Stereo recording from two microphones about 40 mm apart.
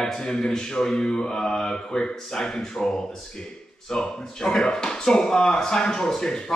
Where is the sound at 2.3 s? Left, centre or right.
Centre.